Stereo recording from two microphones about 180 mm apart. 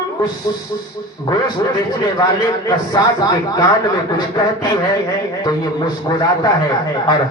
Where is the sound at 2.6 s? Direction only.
20° left (ahead or behind).